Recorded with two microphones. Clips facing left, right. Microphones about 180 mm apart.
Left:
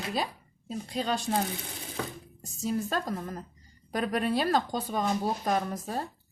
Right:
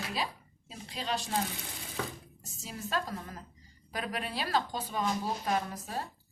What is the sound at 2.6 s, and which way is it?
Speech, 45° left (ahead or behind).